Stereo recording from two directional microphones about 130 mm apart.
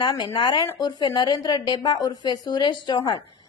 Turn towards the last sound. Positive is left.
turn(degrees=30)  # may be behind; listen again after turning